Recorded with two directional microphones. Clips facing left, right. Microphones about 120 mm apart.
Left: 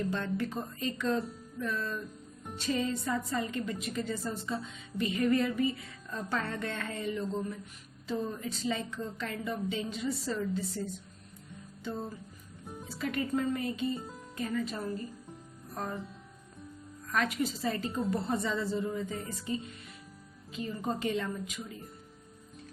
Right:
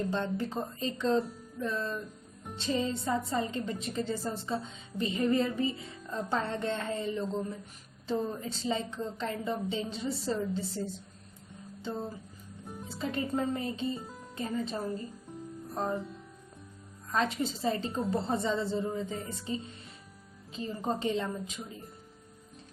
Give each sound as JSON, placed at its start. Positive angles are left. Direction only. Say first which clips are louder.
{"t": 0.0, "sound": "a woman's voice", "louder": "right 1 dB", "side_deg": -25}
{"t": 8.4, "sound": "a woman's voice", "louder": "right 1 dB", "side_deg": -30}
{"t": 12.6, "sound": "music", "louder": "right 1 dB", "side_deg": 0}
{"t": 13.0, "sound": "a woman's voice", "louder": "even", "side_deg": -30}
{"t": 15.7, "sound": "music", "louder": "right 5 dB", "side_deg": -30}
{"t": 17.1, "sound": "a woman's voice", "louder": "right 1 dB", "side_deg": -25}